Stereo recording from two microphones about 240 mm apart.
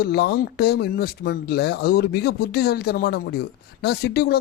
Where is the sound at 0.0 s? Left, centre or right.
Left.